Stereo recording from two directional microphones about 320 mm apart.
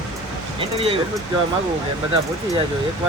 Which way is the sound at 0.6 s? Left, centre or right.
Centre.